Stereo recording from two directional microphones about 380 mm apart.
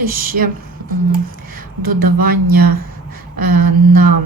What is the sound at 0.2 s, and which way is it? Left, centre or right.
Speech, right.